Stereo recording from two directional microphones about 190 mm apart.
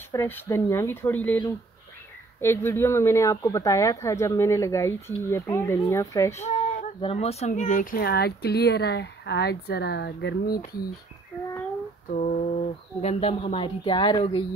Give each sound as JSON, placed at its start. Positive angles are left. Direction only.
{"t": 0.1, "sound": "speech", "side_deg": 15}
{"t": 2.4, "sound": "speech", "side_deg": 10}
{"t": 7.0, "sound": "speech", "side_deg": 30}
{"t": 12.1, "sound": "speech", "side_deg": 40}